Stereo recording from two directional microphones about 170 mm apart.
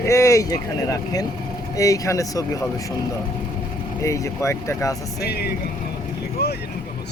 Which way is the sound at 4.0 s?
15° left (ahead or behind).